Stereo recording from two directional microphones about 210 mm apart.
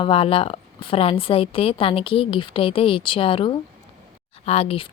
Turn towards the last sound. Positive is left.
turn(degrees=25)  # may be behind; listen again after turning